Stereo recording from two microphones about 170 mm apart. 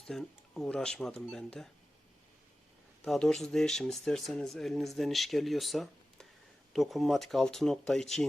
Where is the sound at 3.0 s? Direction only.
5° left (ahead or behind).